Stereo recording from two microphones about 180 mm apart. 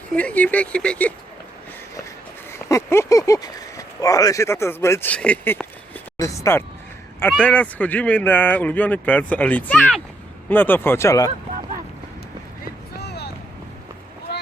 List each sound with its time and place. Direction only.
0.1 s speech: 5° left (ahead or behind)
2.5 s speech: 15° left (ahead or behind)
13.0 s vehicle: 65° left (ahead or behind)